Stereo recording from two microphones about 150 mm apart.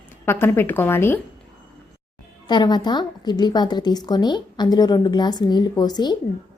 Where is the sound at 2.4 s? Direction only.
30° left (ahead or behind).